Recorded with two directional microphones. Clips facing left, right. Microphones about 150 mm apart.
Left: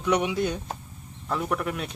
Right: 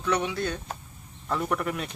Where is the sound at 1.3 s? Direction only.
Centre (ahead or behind).